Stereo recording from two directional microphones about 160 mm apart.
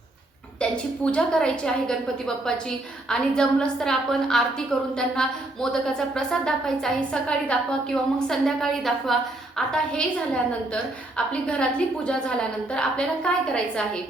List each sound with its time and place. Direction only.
0.6 s a woman's voice: 5° left (ahead or behind)